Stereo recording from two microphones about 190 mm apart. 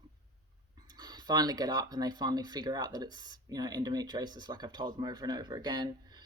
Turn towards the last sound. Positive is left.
turn(degrees=-20)  # may be behind; listen again after turning